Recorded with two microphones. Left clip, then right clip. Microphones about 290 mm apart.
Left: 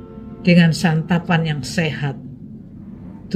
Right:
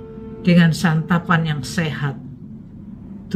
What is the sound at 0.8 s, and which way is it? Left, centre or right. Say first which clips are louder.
Speech: even; right.